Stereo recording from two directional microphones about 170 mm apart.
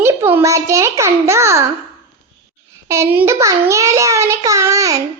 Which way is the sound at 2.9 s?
15° right (ahead or behind).